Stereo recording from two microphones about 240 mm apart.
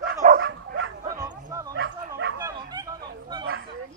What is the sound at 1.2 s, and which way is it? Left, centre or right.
Bow-wow, centre.